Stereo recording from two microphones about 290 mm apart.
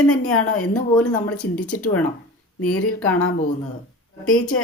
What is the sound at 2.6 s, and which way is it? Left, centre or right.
Speech, left.